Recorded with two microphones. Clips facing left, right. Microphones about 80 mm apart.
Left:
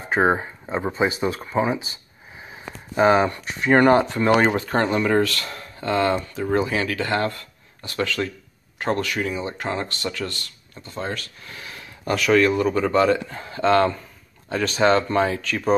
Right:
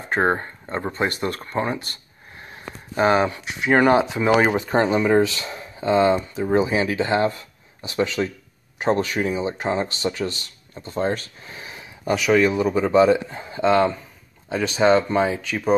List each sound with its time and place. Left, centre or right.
0.1 s speech: centre; by 10.8 s right
10.8 s speech: right; by 15.7 s centre